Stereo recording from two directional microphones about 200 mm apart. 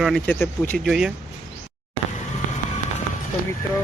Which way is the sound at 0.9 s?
5° right (ahead or behind).